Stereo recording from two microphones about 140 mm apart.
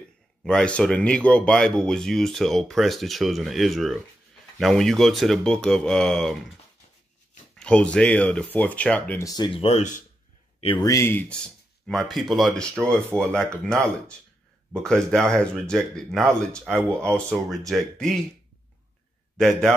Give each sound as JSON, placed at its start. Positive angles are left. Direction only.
{"t": 0.4, "sound": "speech", "side_deg": 5}
{"t": 7.5, "sound": "speech", "side_deg": 5}
{"t": 9.2, "sound": "speech", "side_deg": 25}
{"t": 9.5, "sound": "speech", "side_deg": 45}
{"t": 10.6, "sound": "speech", "side_deg": 40}
{"t": 10.9, "sound": "speech", "side_deg": 20}
{"t": 12.8, "sound": "speech", "side_deg": -20}
{"t": 13.2, "sound": "speech", "side_deg": 5}
{"t": 19.3, "sound": "a man's voice", "side_deg": 5}